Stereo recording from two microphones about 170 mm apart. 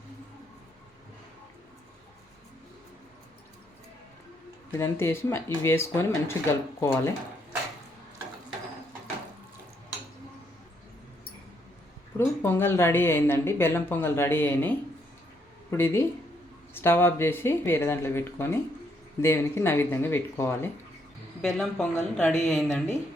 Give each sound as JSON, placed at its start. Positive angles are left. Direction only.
{"t": 4.8, "sound": "speech", "side_deg": 15}
{"t": 12.1, "sound": "speech", "side_deg": 15}
{"t": 15.7, "sound": "speech", "side_deg": 15}
{"t": 21.4, "sound": "speech", "side_deg": 5}